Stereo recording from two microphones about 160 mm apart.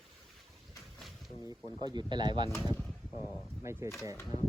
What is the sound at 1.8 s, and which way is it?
Speech, 25° right (ahead or behind).